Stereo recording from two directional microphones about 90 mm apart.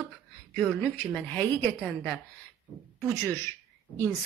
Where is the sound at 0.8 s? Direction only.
15° left (ahead or behind).